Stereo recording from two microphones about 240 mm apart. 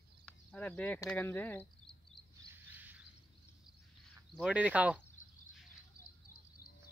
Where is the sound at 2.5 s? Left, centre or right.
Centre.